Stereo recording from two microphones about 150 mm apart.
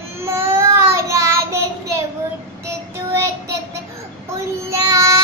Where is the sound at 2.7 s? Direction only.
15° right (ahead or behind).